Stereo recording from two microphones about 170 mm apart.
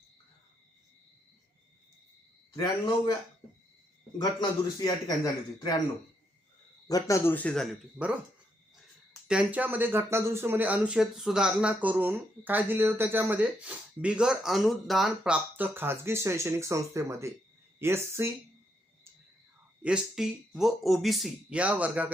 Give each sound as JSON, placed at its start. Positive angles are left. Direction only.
{"t": 2.6, "sound": "a man's voice", "side_deg": 25}
{"t": 4.2, "sound": "a man's voice", "side_deg": 25}
{"t": 6.8, "sound": "speech", "side_deg": 20}
{"t": 9.2, "sound": "speech", "side_deg": -5}
{"t": 19.8, "sound": "speech", "side_deg": -5}